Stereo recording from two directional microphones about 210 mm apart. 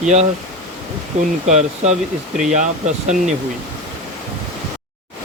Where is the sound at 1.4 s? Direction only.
35° right (ahead or behind).